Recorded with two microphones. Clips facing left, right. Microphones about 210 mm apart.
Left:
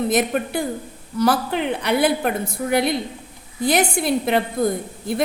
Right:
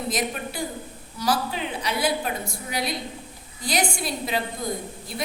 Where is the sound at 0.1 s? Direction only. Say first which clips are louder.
Left 8 dB; 60° left (ahead or behind).